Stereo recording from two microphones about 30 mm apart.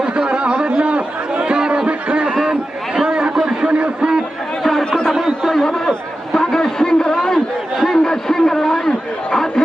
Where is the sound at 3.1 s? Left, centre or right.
Right.